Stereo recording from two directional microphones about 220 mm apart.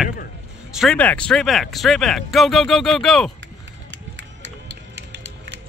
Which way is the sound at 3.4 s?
55° right (ahead or behind).